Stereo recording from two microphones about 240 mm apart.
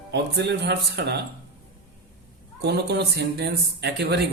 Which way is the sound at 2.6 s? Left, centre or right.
Right.